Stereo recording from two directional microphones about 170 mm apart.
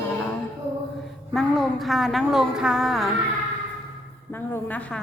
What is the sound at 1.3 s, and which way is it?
A woman's voice, centre (ahead or behind).